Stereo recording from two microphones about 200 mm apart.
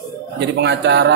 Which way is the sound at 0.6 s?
60° right (ahead or behind).